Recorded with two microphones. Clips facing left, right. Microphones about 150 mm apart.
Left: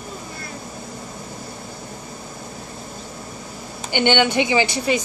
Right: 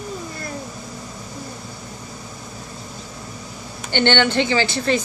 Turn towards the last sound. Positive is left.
turn(degrees=10)  # may be behind; listen again after turning